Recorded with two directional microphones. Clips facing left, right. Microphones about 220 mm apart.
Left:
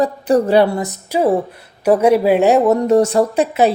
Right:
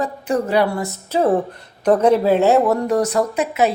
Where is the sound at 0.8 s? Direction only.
10° left (ahead or behind); by 3.7 s 30° left (ahead or behind).